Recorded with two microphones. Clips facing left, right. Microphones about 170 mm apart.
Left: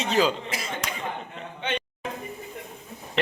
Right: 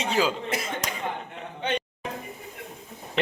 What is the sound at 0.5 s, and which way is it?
Speech, 55° right (ahead or behind).